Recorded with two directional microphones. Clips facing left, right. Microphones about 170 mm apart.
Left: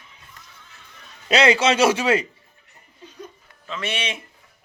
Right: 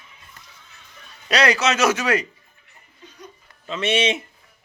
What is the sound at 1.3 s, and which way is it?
Speech, 25° left (ahead or behind).